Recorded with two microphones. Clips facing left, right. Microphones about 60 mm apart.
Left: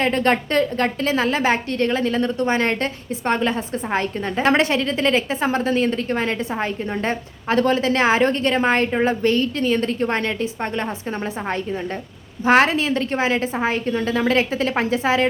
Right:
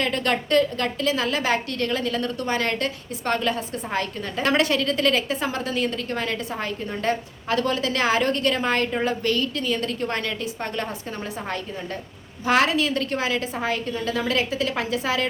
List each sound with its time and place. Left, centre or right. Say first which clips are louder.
0.0 s a woman's voice: left 5 dB; left
12.5 s a woman's voice: left 4 dB; left